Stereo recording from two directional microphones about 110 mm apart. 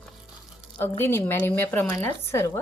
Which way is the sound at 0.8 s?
20° left (ahead or behind).